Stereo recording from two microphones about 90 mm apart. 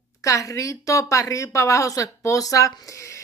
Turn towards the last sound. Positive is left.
turn(degrees=35)  # may be behind; listen again after turning